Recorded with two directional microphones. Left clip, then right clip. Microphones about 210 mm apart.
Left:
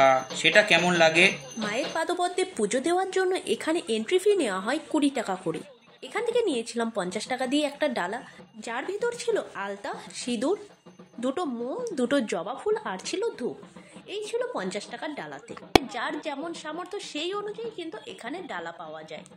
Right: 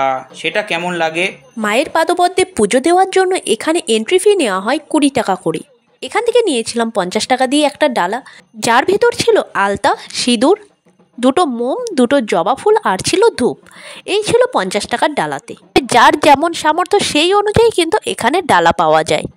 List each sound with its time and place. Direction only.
0.0 s speech: 5° right (ahead or behind)
1.6 s a woman's voice: 50° right (ahead or behind)